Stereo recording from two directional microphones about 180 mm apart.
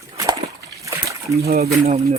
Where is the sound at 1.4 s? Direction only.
60° right (ahead or behind).